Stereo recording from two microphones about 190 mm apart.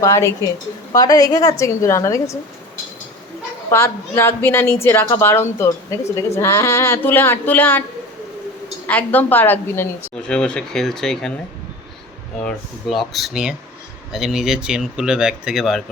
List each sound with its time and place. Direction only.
0.0 s a woman's voice: 15° left (ahead or behind)
3.7 s a woman's voice: 15° left (ahead or behind)
8.9 s a woman's voice: 10° left (ahead or behind)
12.4 s speech: 5° left (ahead or behind)